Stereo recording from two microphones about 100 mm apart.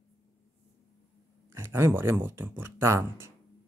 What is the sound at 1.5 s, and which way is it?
Speech, 25° right (ahead or behind).